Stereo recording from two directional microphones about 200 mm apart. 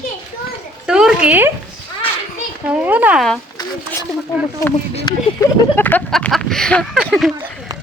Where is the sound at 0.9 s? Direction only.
5° right (ahead or behind).